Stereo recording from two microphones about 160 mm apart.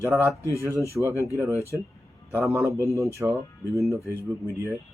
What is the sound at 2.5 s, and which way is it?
Speech, 20° right (ahead or behind).